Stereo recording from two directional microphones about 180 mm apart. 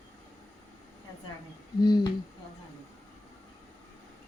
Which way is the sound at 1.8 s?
25° left (ahead or behind).